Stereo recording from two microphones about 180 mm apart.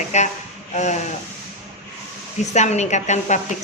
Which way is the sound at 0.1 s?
40° left (ahead or behind).